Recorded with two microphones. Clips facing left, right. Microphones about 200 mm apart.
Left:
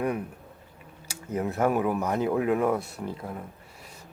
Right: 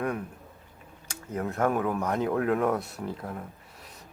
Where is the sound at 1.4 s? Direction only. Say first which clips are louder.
Left 2 dB; 10° left (ahead or behind).